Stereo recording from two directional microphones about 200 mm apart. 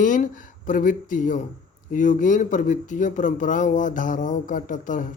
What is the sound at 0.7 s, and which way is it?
Speech, 40° left (ahead or behind).